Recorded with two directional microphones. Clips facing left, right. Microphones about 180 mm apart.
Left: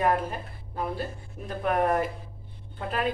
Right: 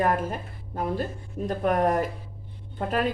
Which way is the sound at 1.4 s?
40° right (ahead or behind).